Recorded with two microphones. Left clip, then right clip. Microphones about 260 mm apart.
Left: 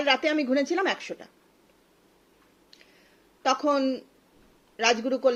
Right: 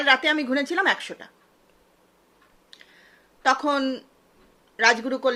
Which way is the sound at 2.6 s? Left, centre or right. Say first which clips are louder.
Right 6 dB; centre.